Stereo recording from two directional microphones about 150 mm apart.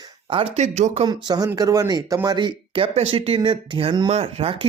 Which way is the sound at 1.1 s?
25° right (ahead or behind).